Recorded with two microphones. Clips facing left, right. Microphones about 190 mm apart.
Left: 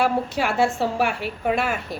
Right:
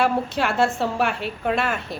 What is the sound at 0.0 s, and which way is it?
A woman's voice, 10° left (ahead or behind).